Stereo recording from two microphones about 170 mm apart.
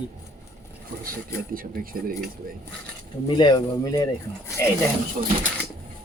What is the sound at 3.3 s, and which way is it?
Speech, 25° left (ahead or behind).